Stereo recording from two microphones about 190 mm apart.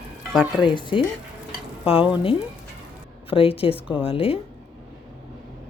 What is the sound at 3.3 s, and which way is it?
Speech, 30° left (ahead or behind).